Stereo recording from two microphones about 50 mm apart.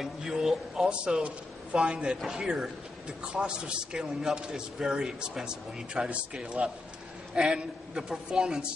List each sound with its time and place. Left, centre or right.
0.0 s a man's voice: centre